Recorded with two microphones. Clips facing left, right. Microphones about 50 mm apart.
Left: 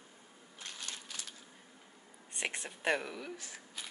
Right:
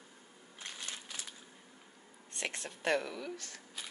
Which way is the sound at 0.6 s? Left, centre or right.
Centre.